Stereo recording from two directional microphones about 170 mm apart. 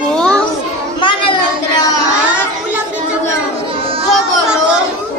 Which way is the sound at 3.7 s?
30° right (ahead or behind).